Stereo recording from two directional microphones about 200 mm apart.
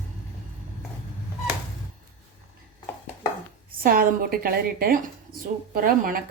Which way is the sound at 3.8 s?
45° right (ahead or behind).